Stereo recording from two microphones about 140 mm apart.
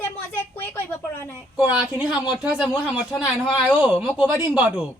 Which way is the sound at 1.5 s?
5° right (ahead or behind).